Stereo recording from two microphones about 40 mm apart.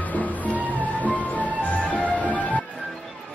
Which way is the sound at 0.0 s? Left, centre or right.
Left.